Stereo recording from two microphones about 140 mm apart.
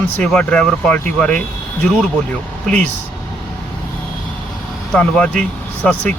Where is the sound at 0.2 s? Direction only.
5° left (ahead or behind).